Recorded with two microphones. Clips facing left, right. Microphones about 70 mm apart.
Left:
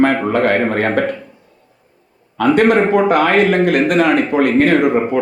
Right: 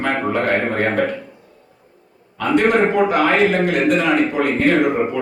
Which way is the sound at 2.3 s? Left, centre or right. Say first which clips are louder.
Left 4 dB; left.